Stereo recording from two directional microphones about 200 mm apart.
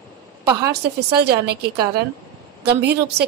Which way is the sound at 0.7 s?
55° right (ahead or behind).